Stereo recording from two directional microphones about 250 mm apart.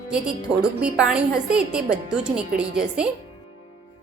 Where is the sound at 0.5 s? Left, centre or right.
Centre.